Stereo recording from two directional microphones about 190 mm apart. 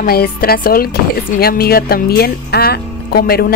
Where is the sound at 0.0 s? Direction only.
50° left (ahead or behind).